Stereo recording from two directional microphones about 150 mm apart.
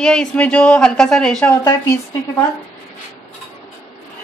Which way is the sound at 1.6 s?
20° left (ahead or behind).